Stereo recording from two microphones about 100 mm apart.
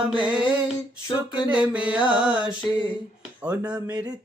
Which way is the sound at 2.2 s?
10° right (ahead or behind).